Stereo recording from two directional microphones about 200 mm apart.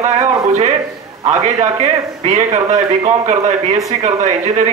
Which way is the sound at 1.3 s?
35° right (ahead or behind).